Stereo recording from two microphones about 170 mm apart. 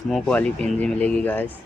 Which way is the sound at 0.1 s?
5° left (ahead or behind).